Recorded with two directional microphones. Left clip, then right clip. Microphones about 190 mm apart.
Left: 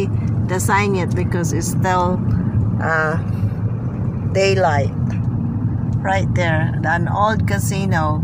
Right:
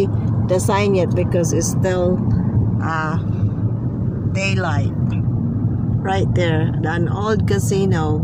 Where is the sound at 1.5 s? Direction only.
25° left (ahead or behind).